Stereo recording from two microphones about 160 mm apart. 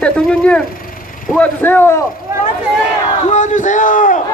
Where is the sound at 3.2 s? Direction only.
50° left (ahead or behind).